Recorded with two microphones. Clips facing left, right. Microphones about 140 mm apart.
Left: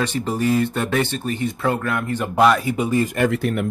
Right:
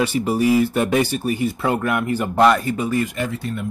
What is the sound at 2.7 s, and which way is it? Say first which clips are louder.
Speech: left 1 dB; 20° left (ahead or behind).